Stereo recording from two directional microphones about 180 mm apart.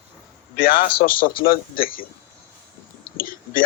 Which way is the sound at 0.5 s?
50° left (ahead or behind).